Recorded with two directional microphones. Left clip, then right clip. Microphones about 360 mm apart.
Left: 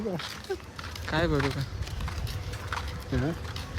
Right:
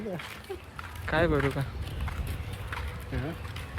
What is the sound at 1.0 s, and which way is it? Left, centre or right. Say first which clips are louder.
Speech: right 2 dB; centre.